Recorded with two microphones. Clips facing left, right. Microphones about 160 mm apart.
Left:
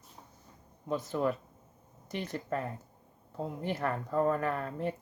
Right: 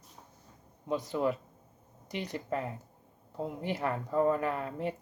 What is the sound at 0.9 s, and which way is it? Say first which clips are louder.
Speech: right 1 dB; 15° right (ahead or behind).